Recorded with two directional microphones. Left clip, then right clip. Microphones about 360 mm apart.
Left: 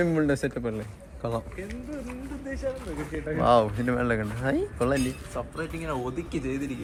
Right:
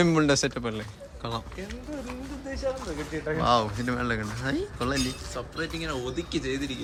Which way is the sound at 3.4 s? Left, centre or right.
Centre.